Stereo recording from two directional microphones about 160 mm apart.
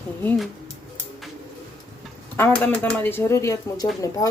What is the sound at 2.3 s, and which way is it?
Speech, 10° left (ahead or behind).